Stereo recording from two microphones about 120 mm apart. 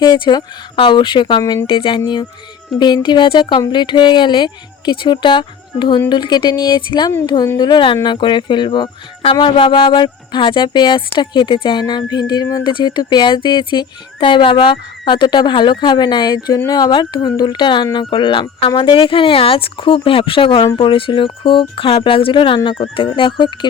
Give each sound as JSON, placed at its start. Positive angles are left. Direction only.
{"t": 0.0, "sound": "speech", "side_deg": 35}